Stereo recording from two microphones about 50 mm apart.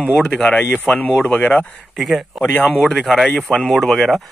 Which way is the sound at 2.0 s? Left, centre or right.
Centre.